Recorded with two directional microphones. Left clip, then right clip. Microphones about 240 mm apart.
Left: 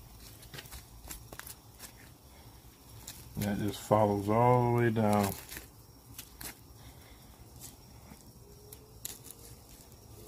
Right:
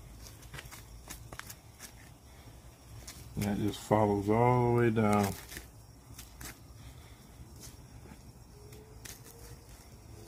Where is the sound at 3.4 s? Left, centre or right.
Centre.